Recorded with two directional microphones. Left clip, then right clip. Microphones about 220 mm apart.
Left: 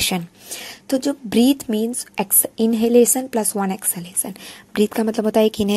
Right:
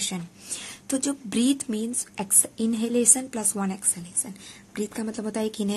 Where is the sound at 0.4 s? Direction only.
20° left (ahead or behind).